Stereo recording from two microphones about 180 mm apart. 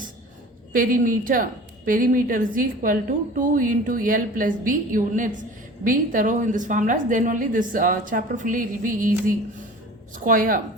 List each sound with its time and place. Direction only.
0.7 s a woman's voice: 50° right (ahead or behind)